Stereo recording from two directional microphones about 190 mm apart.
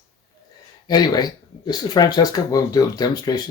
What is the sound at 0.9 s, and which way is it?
Speech, 20° left (ahead or behind).